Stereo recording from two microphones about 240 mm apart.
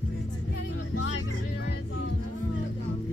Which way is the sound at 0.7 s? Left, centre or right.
Left.